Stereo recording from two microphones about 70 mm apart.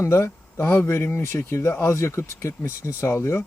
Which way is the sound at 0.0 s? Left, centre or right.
Left.